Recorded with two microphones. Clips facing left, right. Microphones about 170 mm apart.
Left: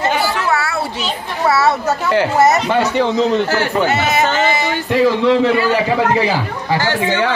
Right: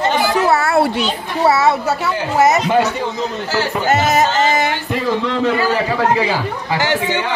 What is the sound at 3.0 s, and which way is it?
Speech, 55° left (ahead or behind).